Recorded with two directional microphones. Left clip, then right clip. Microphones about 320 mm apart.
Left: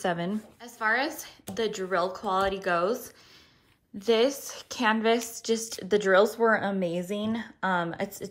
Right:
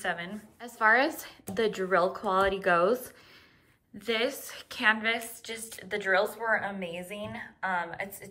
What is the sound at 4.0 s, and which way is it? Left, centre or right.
A woman's voice, centre.